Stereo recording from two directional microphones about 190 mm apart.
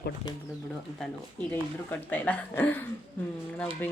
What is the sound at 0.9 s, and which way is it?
Speech, 5° left (ahead or behind).